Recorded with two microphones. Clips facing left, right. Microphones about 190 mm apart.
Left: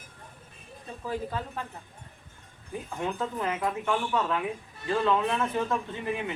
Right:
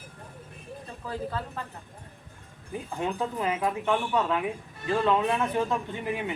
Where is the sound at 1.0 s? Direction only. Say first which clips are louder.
Left 1 dB; 15° left (ahead or behind).